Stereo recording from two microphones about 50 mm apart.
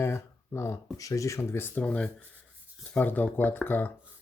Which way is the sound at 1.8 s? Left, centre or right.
Left.